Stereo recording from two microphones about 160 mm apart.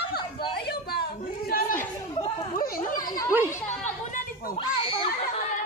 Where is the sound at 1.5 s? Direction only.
65° left (ahead or behind).